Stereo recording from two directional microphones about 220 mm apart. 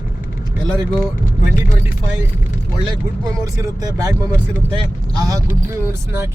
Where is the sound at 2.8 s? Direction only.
15° right (ahead or behind).